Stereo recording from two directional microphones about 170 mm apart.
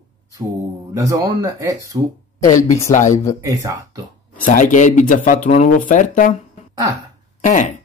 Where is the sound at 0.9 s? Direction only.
20° right (ahead or behind).